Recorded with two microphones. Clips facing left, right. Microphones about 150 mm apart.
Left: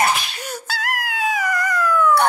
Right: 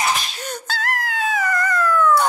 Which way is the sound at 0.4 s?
10° left (ahead or behind).